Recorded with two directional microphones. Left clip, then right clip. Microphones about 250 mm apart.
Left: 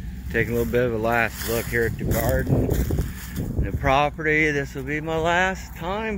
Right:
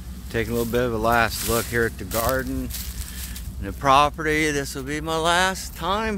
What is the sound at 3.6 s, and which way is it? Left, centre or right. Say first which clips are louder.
Speech: right 3 dB; centre.